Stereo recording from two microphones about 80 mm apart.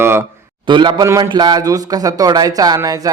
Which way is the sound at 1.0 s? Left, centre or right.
Right.